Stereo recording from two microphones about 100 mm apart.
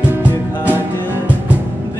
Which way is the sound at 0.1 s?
20° right (ahead or behind).